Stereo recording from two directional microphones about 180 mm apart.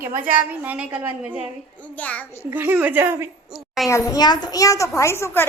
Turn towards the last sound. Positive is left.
turn(degrees=15)  # may be behind; listen again after turning